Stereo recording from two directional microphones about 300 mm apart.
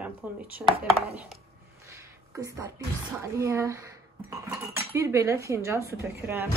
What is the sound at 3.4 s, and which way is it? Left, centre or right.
Speech, centre.